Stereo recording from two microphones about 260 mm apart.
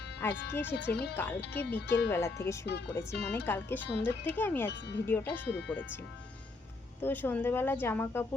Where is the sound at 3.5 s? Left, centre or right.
Centre.